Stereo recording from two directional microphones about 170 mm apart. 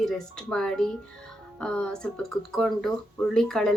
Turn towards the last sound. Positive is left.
turn(degrees=5)  # may be behind; listen again after turning